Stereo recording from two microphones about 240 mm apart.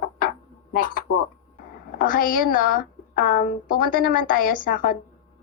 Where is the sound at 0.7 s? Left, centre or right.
Left.